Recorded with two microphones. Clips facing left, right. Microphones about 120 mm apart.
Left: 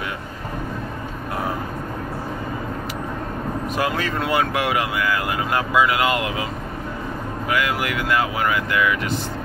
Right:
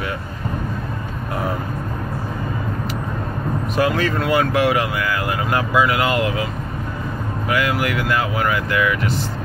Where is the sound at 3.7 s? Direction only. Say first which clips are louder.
Right 5 dB; 15° left (ahead or behind).